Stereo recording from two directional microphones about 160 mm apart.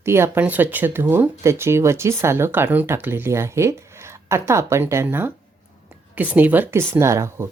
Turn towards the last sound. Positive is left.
turn(degrees=-15)  # may be behind; listen again after turning